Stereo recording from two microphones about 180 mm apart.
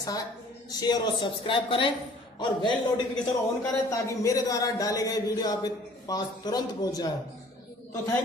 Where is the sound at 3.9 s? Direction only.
20° left (ahead or behind).